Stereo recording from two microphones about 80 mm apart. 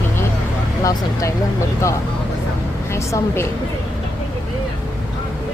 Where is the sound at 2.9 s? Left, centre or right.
Left.